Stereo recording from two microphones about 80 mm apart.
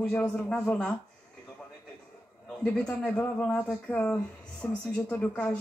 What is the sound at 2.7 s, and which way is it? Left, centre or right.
Speech, centre.